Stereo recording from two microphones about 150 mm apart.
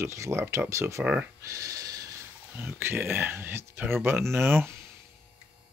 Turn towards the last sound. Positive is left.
turn(degrees=-15)  # may be behind; listen again after turning